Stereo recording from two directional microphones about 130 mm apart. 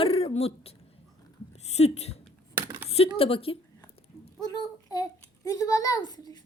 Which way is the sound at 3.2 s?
45° left (ahead or behind).